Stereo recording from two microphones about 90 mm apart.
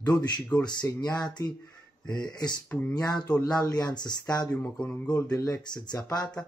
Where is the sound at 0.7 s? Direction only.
50° left (ahead or behind).